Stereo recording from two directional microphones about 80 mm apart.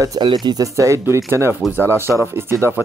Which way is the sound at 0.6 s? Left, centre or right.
Right.